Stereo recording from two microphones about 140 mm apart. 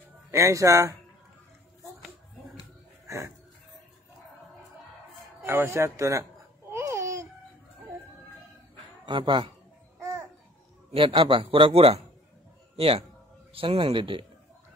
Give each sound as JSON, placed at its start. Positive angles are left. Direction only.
{"t": 0.4, "sound": "speech", "side_deg": -20}
{"t": 3.1, "sound": "a sound", "side_deg": -20}
{"t": 5.5, "sound": "speech", "side_deg": -20}
{"t": 6.7, "sound": "babbling", "side_deg": -20}
{"t": 9.0, "sound": "a man's voice", "side_deg": -35}
{"t": 9.9, "sound": "babbling", "side_deg": -20}
{"t": 10.9, "sound": "a man's voice", "side_deg": -40}